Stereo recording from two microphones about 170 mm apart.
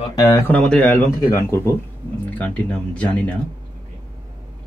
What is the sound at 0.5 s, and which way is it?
Speech, 5° left (ahead or behind).